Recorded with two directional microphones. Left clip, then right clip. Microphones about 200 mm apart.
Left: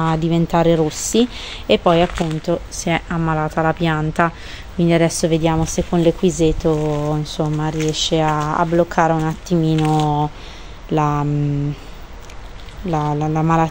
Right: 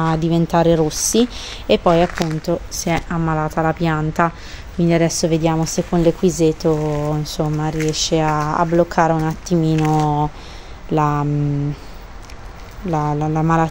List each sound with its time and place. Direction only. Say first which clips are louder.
0.0 s speech: even; 5° right (ahead or behind)
9.8 s speech: even; 15° right (ahead or behind)
10.0 s speech: even; centre (ahead or behind)
12.9 s speech: even; 5° left (ahead or behind)